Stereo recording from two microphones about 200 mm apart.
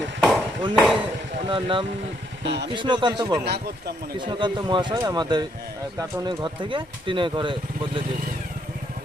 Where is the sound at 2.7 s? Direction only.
25° right (ahead or behind).